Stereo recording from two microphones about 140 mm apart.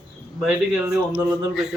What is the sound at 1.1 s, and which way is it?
Speech, 5° right (ahead or behind).